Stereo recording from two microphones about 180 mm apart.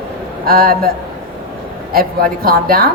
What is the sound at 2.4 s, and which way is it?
Speech, 55° right (ahead or behind).